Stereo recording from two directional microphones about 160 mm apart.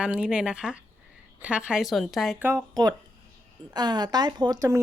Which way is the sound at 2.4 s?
20° right (ahead or behind).